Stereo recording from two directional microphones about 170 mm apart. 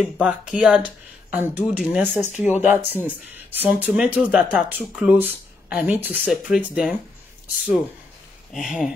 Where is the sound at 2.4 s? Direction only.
45° left (ahead or behind).